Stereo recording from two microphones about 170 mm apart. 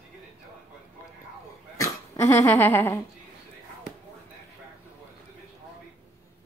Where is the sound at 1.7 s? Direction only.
15° left (ahead or behind).